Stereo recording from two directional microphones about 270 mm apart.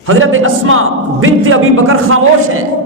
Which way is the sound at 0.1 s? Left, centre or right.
Right.